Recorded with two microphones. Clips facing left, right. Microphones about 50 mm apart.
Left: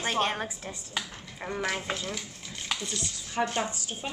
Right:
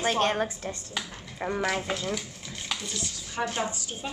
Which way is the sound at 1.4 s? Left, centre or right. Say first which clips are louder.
Right 5 dB; centre.